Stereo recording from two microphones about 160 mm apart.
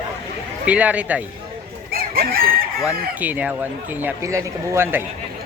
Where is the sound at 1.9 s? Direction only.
70° right (ahead or behind).